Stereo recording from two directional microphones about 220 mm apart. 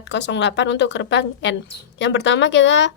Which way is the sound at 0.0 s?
55° left (ahead or behind).